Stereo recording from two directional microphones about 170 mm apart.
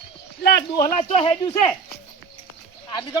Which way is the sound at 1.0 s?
30° left (ahead or behind).